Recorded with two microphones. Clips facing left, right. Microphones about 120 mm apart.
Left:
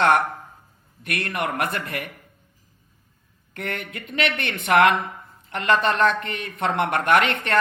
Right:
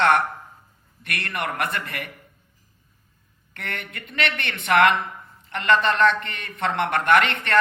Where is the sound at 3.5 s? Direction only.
40° left (ahead or behind).